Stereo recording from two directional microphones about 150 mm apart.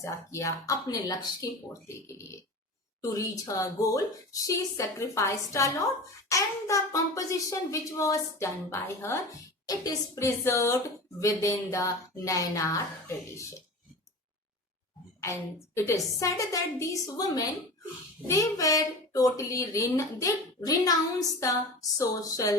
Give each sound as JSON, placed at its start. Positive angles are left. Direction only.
{"t": 0.0, "sound": "speech", "side_deg": 20}
{"t": 15.2, "sound": "speech", "side_deg": 20}